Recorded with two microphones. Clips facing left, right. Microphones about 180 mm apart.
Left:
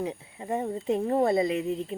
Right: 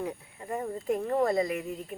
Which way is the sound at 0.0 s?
20° left (ahead or behind).